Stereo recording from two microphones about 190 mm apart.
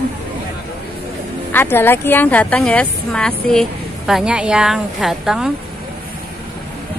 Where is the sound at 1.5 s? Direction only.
10° left (ahead or behind).